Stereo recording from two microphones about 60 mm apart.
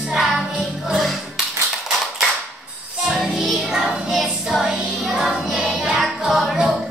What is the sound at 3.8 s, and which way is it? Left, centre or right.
Child singing, centre.